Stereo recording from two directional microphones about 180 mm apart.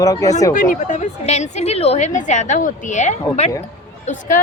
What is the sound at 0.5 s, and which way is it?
A woman's voice, 45° left (ahead or behind).